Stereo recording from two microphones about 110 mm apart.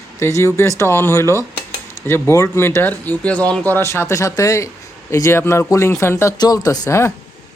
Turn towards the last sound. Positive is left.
turn(degrees=25)  # may be behind; listen again after turning